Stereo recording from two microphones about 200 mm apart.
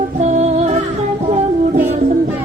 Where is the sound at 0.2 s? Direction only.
35° right (ahead or behind).